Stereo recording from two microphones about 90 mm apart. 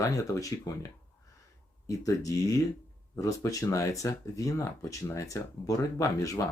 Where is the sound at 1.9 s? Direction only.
40° left (ahead or behind).